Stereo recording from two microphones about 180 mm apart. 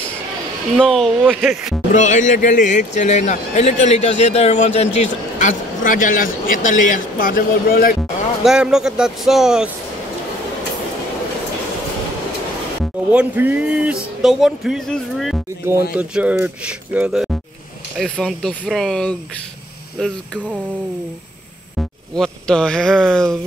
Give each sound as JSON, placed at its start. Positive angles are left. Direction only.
{"t": 0.7, "sound": "speech", "side_deg": 0}
{"t": 2.0, "sound": "a man's voice", "side_deg": 40}
{"t": 8.5, "sound": "speech", "side_deg": -5}
{"t": 12.8, "sound": "speech", "side_deg": -5}
{"t": 21.7, "sound": "speech", "side_deg": 5}